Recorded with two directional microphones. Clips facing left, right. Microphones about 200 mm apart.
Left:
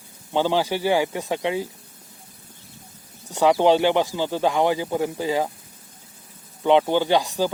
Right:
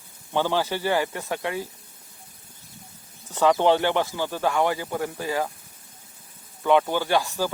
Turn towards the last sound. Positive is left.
turn(degrees=15)  # may be behind; listen again after turning